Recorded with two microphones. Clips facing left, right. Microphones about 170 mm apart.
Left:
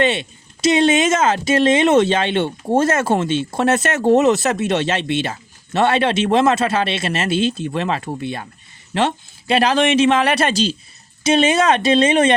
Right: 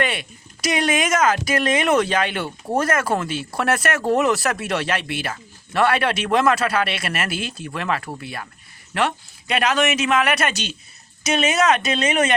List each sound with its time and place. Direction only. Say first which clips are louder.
0.0 s a man's voice: left 6 dB; 25° left (ahead or behind)